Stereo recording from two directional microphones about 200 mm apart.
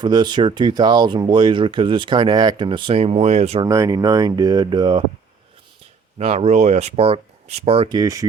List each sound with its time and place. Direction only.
0.0 s speech: 20° right (ahead or behind)
3.7 s speech: 15° right (ahead or behind)
6.1 s speech: 30° right (ahead or behind)
7.9 s speech: 15° right (ahead or behind)